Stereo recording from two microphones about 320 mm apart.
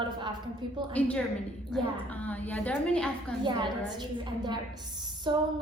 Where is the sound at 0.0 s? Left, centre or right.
Centre.